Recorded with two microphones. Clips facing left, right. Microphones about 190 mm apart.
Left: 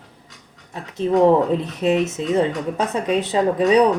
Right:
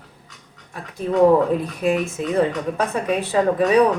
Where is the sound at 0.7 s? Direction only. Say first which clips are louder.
Left 3 dB; 25° left (ahead or behind).